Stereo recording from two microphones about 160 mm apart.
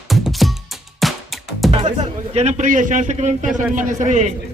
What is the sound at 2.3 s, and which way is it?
A man's voice, 45° right (ahead or behind).